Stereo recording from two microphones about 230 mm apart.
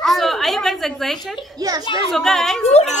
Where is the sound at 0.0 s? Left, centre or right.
Centre.